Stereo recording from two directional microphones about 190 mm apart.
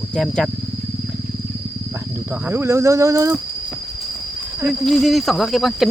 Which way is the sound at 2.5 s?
15° right (ahead or behind).